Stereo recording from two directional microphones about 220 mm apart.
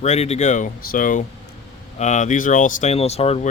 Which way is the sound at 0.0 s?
30° left (ahead or behind).